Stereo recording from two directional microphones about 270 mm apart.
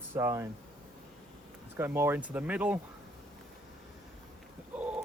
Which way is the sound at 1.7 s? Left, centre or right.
Centre.